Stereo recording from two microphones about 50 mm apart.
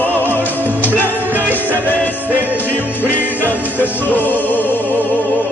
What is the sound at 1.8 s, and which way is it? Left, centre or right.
Music, left.